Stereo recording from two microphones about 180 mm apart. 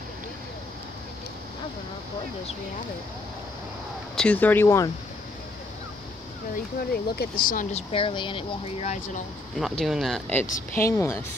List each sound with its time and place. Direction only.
4.1 s speech: 5° left (ahead or behind)
6.9 s speech: 55° left (ahead or behind)
7.9 s speech: 30° left (ahead or behind)
9.6 s speech: centre (ahead or behind)
10.7 s a woman's voice: 15° left (ahead or behind)